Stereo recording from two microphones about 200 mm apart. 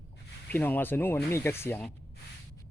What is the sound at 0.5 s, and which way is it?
Speech, 10° left (ahead or behind).